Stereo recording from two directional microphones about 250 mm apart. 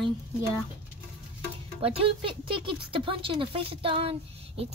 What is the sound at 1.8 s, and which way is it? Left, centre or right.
Speech, right.